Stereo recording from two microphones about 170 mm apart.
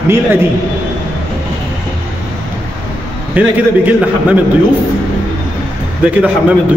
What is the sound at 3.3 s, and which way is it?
Speech, 10° right (ahead or behind).